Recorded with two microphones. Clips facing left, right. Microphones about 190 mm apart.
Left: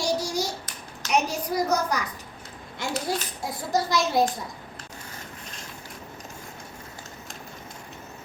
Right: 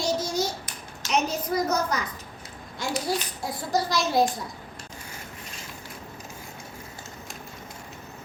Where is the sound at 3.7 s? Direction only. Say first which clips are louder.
Even; 20° left (ahead or behind).